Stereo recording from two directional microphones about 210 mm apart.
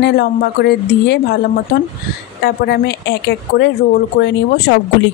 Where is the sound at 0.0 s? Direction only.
50° left (ahead or behind).